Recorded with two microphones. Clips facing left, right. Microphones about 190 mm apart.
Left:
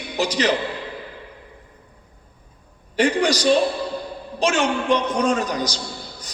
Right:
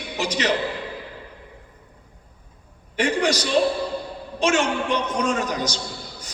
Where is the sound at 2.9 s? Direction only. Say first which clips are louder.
Left 3 dB; 35° left (ahead or behind).